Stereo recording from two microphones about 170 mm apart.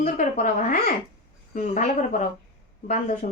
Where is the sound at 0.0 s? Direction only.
45° left (ahead or behind).